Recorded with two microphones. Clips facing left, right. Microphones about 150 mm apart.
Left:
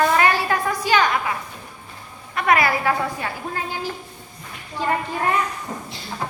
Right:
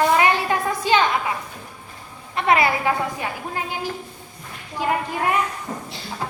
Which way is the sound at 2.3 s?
25° right (ahead or behind).